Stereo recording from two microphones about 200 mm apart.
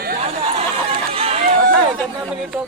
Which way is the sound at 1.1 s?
30° right (ahead or behind).